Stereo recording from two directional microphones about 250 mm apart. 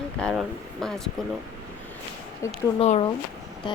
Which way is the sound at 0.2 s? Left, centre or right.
Centre.